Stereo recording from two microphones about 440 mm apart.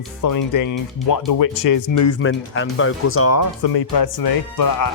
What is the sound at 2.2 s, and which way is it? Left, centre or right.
Speech, left.